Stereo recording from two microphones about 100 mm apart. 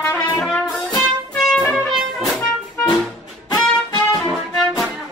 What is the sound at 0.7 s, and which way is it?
Music, centre (ahead or behind).